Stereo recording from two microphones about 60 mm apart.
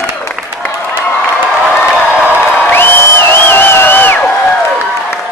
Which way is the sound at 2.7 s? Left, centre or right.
Left.